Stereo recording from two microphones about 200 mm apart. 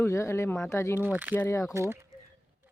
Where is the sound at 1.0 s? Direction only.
10° right (ahead or behind).